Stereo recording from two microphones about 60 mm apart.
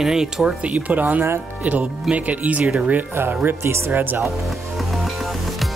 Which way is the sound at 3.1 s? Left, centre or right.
Right.